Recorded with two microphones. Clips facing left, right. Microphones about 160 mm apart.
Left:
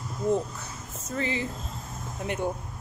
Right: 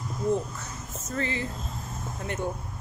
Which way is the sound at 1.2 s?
15° left (ahead or behind).